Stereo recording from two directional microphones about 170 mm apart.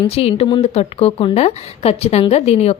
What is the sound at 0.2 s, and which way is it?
Speech, 35° left (ahead or behind).